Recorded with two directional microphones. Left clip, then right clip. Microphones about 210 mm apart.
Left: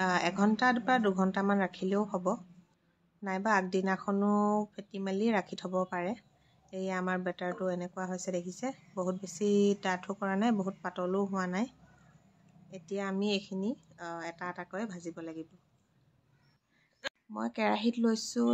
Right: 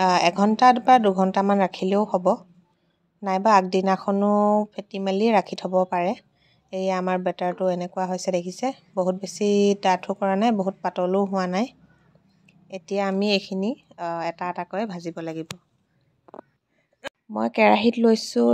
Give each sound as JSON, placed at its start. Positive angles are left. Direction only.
{"t": 0.0, "sound": "speech", "side_deg": -20}
{"t": 17.4, "sound": "speech", "side_deg": -35}